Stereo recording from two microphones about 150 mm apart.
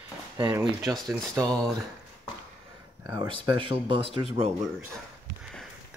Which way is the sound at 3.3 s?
35° right (ahead or behind).